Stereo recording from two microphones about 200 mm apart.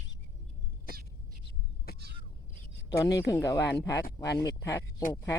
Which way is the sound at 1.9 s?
50° left (ahead or behind).